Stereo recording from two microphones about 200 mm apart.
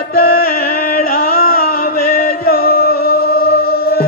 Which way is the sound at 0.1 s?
50° left (ahead or behind).